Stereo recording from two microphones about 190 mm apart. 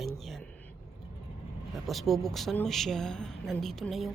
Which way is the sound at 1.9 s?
Centre (ahead or behind).